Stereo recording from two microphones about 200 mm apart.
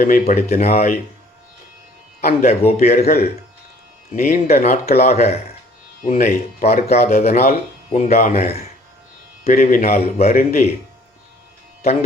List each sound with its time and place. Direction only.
0.0 s speech: 40° left (ahead or behind)
2.2 s speech: 35° left (ahead or behind)
4.1 s a man's voice: 40° left (ahead or behind)
4.9 s speech: 35° left (ahead or behind)
10.2 s a man's voice: 45° left (ahead or behind)